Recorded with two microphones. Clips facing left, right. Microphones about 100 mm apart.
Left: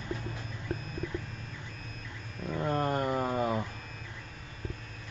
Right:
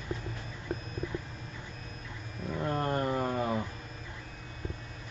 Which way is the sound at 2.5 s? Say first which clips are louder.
Left 1 dB; 5° left (ahead or behind).